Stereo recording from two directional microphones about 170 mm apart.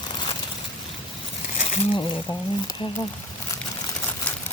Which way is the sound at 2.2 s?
25° left (ahead or behind).